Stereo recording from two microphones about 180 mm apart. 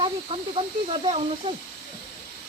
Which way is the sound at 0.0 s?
30° right (ahead or behind).